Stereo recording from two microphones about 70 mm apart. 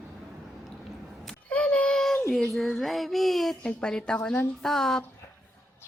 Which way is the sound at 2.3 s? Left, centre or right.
Centre.